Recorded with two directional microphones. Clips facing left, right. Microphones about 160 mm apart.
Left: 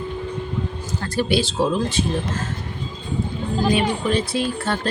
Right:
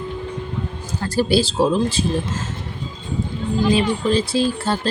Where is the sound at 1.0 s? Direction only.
35° right (ahead or behind).